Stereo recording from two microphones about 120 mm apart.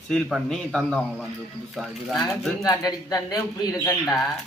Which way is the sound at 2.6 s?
30° left (ahead or behind).